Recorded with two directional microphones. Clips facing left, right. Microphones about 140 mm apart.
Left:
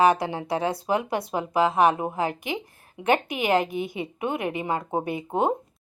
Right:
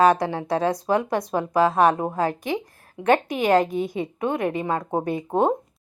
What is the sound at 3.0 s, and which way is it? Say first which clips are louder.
Speech: right 3 dB; 15° left (ahead or behind).